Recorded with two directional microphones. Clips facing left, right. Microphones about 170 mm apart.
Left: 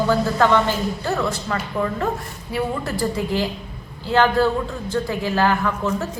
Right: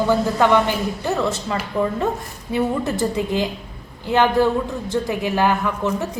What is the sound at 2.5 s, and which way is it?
A woman's voice, 20° right (ahead or behind).